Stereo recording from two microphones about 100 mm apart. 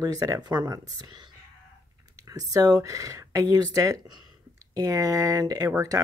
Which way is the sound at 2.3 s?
35° right (ahead or behind).